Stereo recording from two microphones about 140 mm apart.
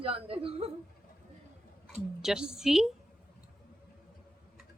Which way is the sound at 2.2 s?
5° right (ahead or behind).